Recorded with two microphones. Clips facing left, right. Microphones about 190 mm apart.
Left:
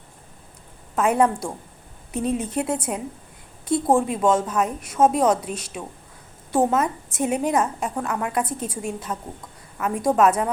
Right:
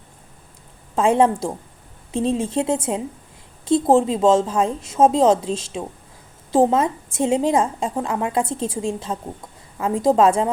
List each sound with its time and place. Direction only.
0.9 s a woman's voice: 25° right (ahead or behind)